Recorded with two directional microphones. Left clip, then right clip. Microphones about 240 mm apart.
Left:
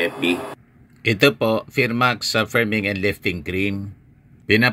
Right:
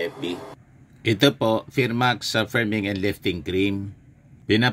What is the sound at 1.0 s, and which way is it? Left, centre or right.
Speech, centre.